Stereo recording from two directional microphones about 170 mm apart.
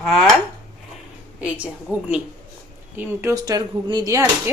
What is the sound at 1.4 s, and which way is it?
Speech, 10° right (ahead or behind).